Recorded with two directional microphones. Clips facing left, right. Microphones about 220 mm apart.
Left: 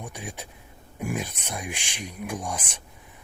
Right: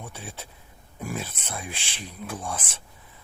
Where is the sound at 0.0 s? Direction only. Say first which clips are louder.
Left 2 dB; 15° left (ahead or behind).